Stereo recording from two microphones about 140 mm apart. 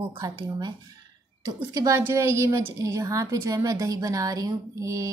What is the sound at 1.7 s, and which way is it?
A woman's voice, 25° right (ahead or behind).